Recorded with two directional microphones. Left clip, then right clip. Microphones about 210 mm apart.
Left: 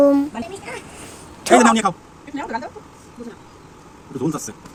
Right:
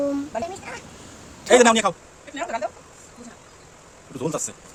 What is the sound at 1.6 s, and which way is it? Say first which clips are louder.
Speech: left 1 dB; 20° right (ahead or behind).